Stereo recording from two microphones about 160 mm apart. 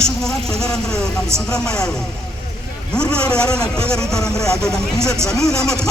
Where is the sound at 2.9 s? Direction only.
5° left (ahead or behind).